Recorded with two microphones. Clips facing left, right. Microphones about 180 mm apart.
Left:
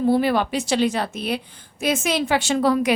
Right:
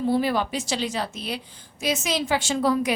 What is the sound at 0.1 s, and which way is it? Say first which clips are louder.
A woman's voice: left 3 dB; 65° left (ahead or behind).